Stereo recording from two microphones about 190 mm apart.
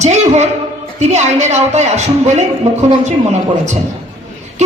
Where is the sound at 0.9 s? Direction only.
35° right (ahead or behind).